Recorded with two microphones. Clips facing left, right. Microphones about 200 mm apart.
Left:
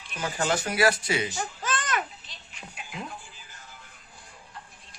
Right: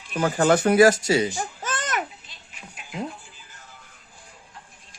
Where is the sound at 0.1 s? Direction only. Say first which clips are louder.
Right 9 dB; 55° right (ahead or behind).